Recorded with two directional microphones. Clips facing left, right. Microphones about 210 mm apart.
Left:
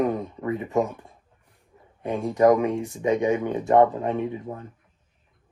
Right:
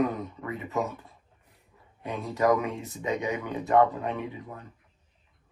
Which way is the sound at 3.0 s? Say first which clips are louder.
Left 8 dB; 25° left (ahead or behind).